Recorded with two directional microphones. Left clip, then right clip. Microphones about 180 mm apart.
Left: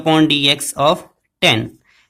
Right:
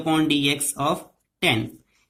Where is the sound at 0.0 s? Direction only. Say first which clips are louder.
Left 8 dB; 40° left (ahead or behind).